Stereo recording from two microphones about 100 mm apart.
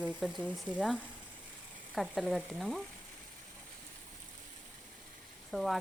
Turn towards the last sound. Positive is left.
turn(degrees=0)  # may be behind; listen again after turning